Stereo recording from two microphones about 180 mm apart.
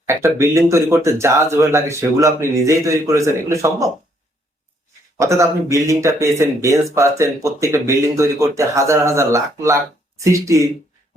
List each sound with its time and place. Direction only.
0.1 s speech: 15° right (ahead or behind)
5.1 s speech: 15° right (ahead or behind)